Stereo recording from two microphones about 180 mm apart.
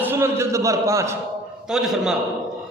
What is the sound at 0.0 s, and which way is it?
A man's voice, 15° right (ahead or behind).